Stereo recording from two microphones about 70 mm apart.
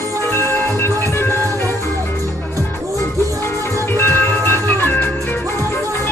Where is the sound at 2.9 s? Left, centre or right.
Left.